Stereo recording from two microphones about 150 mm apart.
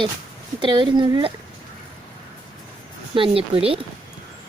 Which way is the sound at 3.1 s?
35° right (ahead or behind).